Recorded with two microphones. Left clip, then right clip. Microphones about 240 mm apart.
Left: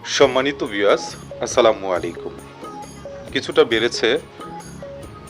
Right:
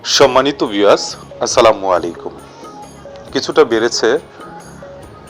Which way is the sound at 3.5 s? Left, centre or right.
Centre.